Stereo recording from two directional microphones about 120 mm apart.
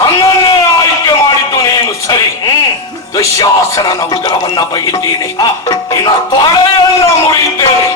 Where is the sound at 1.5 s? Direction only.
35° left (ahead or behind).